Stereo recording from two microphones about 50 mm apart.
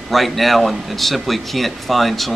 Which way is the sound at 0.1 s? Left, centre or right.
Centre.